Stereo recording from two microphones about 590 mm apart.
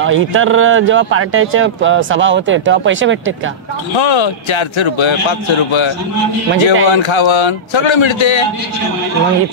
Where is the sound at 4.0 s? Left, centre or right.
Left.